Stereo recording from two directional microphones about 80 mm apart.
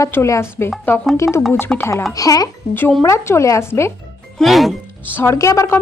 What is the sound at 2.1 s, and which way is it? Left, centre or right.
Speech, left.